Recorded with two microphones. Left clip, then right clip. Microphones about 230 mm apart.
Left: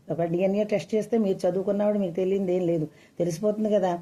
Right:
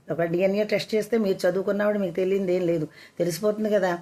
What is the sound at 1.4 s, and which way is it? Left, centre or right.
Speech, right.